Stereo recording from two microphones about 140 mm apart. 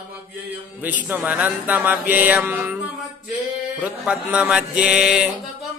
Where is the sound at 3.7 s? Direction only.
10° right (ahead or behind).